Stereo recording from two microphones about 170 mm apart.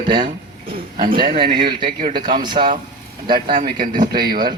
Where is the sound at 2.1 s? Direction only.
25° right (ahead or behind).